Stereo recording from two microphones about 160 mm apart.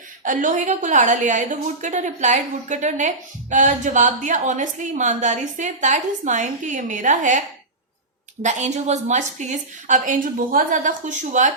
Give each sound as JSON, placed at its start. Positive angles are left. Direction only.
{"t": 0.3, "sound": "a woman's voice", "side_deg": -55}